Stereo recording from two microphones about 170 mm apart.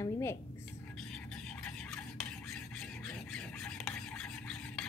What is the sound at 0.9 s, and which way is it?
Stir, 5° left (ahead or behind).